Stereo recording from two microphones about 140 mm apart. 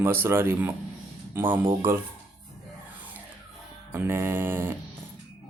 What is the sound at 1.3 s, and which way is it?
Speech, 15° right (ahead or behind).